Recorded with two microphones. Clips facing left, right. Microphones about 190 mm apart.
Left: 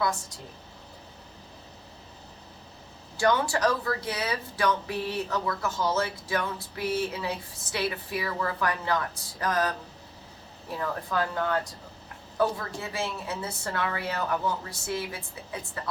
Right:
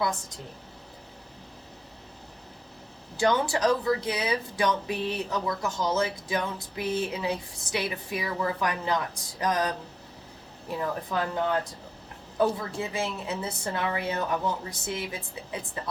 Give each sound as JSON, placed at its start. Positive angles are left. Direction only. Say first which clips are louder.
{"t": 3.2, "sound": "a woman's voice", "louder": "even", "side_deg": -20}